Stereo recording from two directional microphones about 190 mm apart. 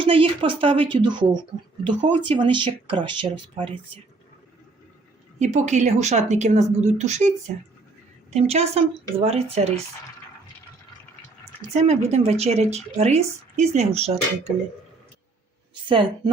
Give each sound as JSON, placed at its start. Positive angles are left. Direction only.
{"t": 0.0, "sound": "speech", "side_deg": -25}
{"t": 5.4, "sound": "speech", "side_deg": -40}
{"t": 11.7, "sound": "speech", "side_deg": -35}
{"t": 15.7, "sound": "speech", "side_deg": -25}